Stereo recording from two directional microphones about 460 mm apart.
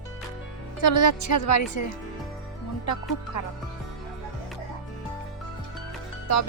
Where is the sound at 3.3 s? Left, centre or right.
Left.